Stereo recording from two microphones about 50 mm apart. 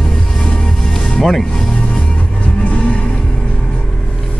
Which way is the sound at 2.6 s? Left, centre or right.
Left.